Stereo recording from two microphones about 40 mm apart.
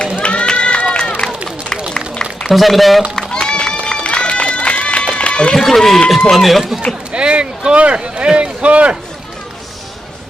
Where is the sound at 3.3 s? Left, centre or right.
Left.